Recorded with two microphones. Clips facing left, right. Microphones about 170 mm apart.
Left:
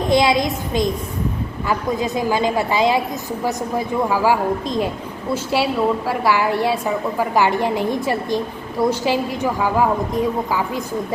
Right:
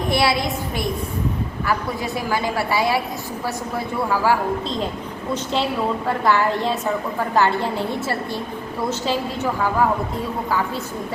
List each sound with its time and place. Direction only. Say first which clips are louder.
0.1 s a woman's voice: left 4 dB; 15° left (ahead or behind)